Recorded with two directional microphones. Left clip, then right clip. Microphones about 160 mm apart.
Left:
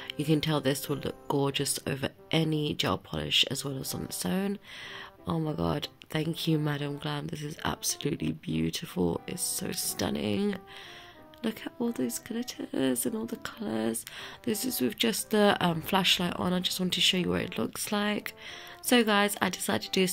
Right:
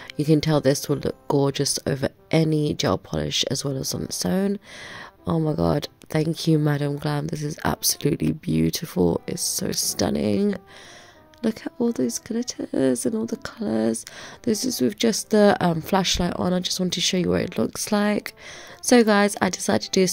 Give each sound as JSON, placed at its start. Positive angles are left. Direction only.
{"t": 0.2, "sound": "speech", "side_deg": -50}